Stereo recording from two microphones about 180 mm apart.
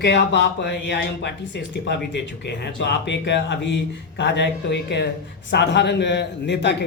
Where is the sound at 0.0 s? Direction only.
75° left (ahead or behind).